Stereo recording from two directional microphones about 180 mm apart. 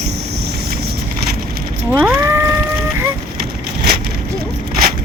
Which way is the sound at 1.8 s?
10° right (ahead or behind).